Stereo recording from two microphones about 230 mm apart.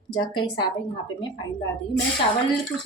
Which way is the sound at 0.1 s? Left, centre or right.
Centre.